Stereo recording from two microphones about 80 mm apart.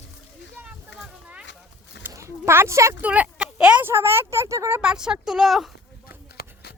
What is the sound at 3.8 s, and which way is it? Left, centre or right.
Speech, right.